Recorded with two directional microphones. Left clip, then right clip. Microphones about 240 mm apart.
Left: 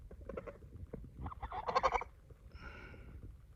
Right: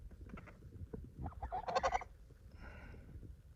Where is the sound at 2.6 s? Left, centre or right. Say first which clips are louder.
Left 4 dB; centre.